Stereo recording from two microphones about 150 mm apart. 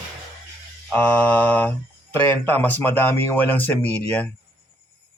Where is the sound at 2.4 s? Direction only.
10° left (ahead or behind).